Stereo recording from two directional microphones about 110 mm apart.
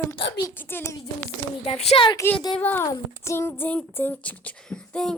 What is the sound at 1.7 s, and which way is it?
Speech, 65° left (ahead or behind).